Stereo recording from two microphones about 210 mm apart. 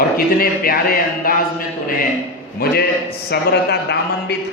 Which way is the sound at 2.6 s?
45° left (ahead or behind).